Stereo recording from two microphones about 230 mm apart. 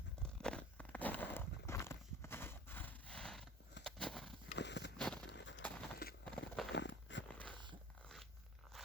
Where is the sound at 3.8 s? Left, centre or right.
Centre.